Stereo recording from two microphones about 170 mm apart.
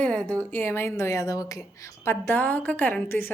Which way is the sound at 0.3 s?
10° left (ahead or behind).